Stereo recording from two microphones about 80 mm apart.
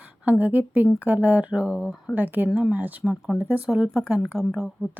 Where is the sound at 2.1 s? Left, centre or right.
Right.